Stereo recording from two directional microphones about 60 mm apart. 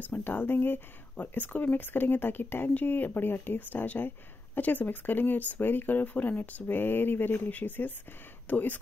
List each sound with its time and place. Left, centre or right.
0.0 s speech: left